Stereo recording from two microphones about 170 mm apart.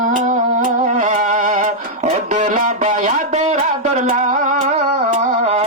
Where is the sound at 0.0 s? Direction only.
45° right (ahead or behind).